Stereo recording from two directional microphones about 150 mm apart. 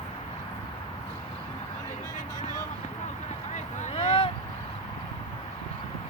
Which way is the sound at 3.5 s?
55° left (ahead or behind).